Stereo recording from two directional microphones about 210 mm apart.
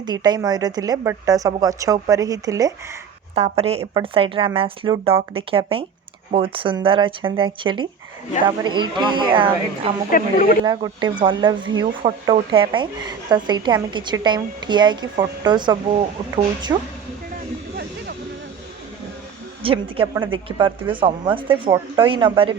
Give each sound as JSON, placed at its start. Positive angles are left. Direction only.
{"t": 0.0, "sound": "speech", "side_deg": -20}
{"t": 3.3, "sound": "speech", "side_deg": -30}
{"t": 10.1, "sound": "speech", "side_deg": 40}
{"t": 10.6, "sound": "speech", "side_deg": -20}
{"t": 19.6, "sound": "speech", "side_deg": -25}